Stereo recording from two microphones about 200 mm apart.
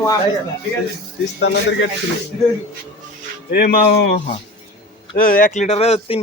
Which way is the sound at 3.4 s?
50° left (ahead or behind).